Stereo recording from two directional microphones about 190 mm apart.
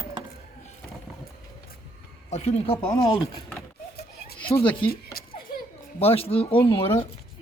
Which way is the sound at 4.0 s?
55° left (ahead or behind).